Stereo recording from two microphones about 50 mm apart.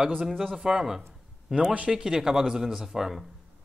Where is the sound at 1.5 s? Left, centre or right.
Right.